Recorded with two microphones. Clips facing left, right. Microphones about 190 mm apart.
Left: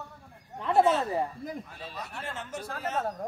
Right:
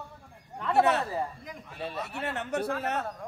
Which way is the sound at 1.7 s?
65° right (ahead or behind).